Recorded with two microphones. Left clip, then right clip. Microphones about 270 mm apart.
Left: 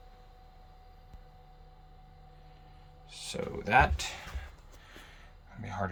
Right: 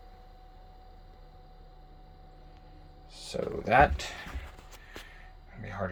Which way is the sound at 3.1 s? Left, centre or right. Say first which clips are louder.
Right 2 dB; centre.